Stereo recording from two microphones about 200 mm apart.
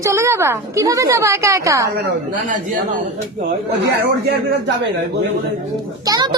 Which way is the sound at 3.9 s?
60° right (ahead or behind).